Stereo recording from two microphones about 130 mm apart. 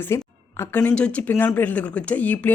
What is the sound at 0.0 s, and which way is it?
Speech, 20° left (ahead or behind).